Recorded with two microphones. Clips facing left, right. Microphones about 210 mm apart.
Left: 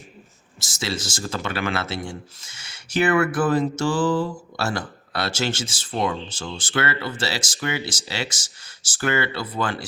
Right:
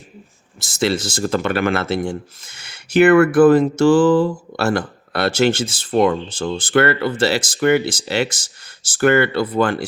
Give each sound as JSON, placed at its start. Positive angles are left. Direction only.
{"t": 0.6, "sound": "speech", "side_deg": -60}